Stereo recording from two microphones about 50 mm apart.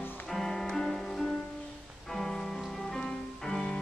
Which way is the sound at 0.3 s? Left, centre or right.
Centre.